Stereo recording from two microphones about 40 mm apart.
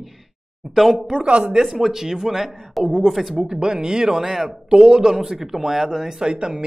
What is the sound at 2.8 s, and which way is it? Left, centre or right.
Speech, centre.